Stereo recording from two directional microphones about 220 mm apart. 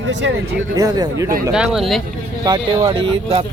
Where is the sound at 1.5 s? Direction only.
Centre (ahead or behind).